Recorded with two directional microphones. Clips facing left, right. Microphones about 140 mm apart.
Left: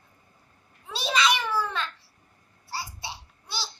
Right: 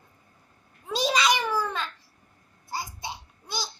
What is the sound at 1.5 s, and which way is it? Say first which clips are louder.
Babbling: even; 15° right (ahead or behind).